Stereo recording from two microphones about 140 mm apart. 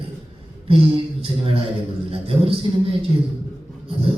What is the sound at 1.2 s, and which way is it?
Music, 40° right (ahead or behind).